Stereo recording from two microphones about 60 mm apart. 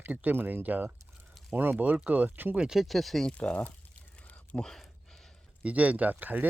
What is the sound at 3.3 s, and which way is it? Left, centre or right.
Speech, centre.